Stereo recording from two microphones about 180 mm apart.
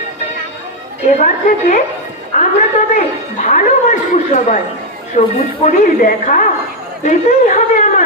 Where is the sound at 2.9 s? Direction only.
45° left (ahead or behind).